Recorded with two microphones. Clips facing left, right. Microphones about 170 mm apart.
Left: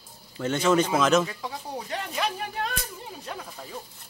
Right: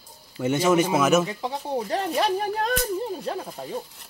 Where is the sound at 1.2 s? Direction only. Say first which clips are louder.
Right 4 dB; 25° right (ahead or behind).